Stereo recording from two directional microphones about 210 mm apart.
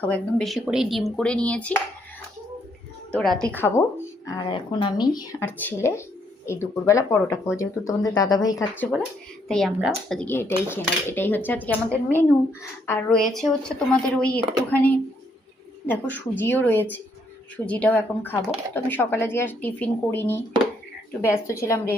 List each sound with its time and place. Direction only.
0.0 s speech: 5° left (ahead or behind)
3.2 s speech: 5° left (ahead or behind)
4.4 s speech: 25° left (ahead or behind)